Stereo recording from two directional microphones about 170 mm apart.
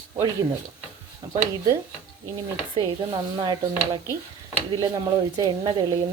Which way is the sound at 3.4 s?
25° right (ahead or behind).